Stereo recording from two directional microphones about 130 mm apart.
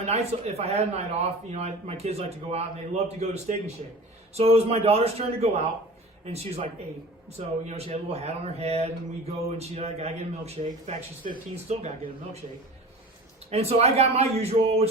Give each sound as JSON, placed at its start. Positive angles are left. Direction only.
{"t": 0.0, "sound": "a man's voice", "side_deg": -55}
{"t": 13.5, "sound": "speech", "side_deg": -55}